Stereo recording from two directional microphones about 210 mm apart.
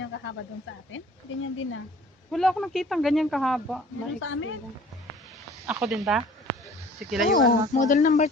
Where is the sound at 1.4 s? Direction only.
70° left (ahead or behind).